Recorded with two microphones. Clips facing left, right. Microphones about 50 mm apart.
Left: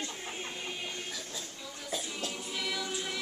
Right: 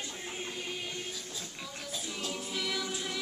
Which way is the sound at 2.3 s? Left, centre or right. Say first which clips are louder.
Right 3 dB; centre.